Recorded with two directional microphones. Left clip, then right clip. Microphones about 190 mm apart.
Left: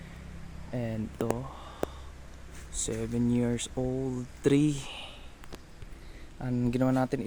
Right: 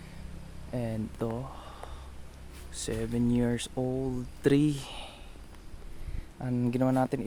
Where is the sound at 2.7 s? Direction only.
Centre (ahead or behind).